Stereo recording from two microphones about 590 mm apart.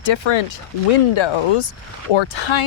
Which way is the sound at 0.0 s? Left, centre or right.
Left.